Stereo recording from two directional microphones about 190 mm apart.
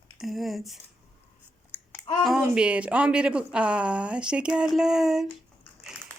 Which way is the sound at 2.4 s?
5° right (ahead or behind).